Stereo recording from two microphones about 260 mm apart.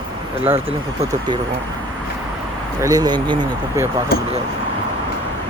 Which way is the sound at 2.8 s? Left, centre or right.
Centre.